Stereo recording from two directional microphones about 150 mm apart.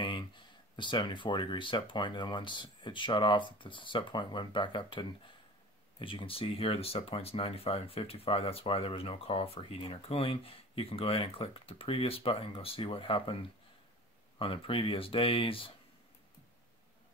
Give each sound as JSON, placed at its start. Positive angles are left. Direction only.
{"t": 0.7, "sound": "speech", "side_deg": 30}
{"t": 14.4, "sound": "speech", "side_deg": 40}